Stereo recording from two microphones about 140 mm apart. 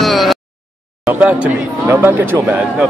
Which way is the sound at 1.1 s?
10° right (ahead or behind).